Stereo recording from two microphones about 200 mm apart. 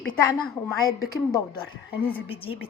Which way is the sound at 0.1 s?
25° left (ahead or behind).